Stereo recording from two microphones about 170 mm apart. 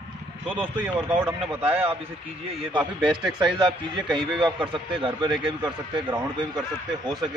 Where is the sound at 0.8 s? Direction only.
10° right (ahead or behind).